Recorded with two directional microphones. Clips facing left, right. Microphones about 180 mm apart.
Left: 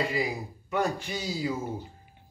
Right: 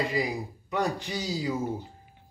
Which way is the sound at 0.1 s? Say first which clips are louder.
Right 1 dB; 15° right (ahead or behind).